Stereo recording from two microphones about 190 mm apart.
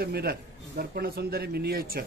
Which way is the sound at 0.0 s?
55° right (ahead or behind).